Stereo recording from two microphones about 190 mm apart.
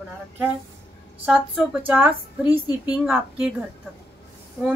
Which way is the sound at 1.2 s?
Centre (ahead or behind).